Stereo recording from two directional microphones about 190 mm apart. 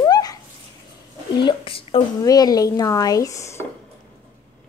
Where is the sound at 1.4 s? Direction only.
25° left (ahead or behind).